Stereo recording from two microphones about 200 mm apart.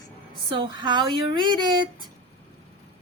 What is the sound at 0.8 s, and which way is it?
Speech, 25° right (ahead or behind).